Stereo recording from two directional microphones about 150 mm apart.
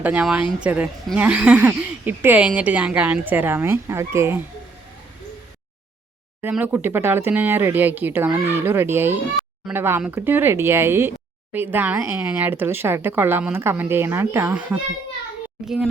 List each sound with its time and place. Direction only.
0.0 s speech: 10° right (ahead or behind)
6.4 s speech: 15° right (ahead or behind)